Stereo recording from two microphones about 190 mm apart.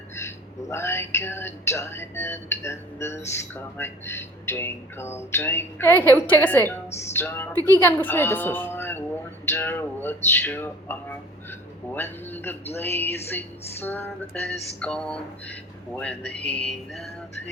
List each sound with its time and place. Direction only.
0.2 s speech: 15° left (ahead or behind)
7.5 s a woman's voice: 20° right (ahead or behind)
7.8 s speech: 10° left (ahead or behind)